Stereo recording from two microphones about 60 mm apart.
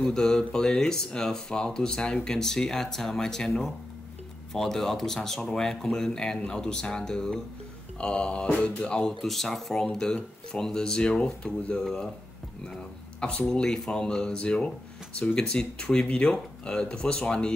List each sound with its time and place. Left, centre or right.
0.0 s speech: centre
9.2 s speech: centre
13.4 s speech: centre